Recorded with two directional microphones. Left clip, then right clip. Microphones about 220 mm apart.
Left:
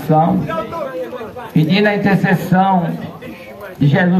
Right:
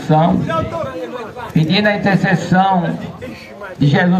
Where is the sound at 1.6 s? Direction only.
30° right (ahead or behind).